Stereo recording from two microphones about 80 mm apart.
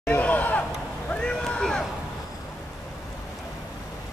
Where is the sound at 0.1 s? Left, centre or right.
Centre.